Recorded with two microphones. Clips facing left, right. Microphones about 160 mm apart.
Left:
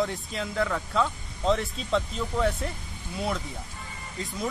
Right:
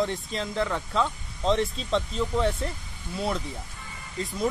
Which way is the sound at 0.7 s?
5° left (ahead or behind).